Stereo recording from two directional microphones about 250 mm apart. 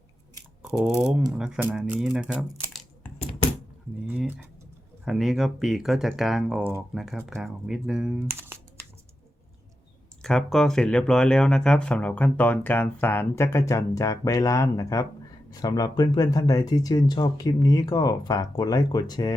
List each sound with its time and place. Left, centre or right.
0.6 s speech: centre
4.1 s speech: centre
10.2 s speech: centre